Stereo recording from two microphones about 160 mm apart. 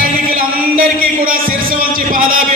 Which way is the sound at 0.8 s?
65° right (ahead or behind).